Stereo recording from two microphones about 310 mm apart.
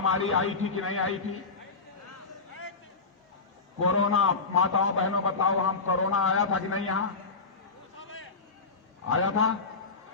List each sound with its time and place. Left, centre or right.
0.0 s a man's voice: left
3.8 s a man's voice: left
9.0 s a man's voice: left